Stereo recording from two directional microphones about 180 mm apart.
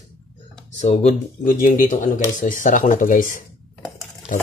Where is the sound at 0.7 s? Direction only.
40° left (ahead or behind).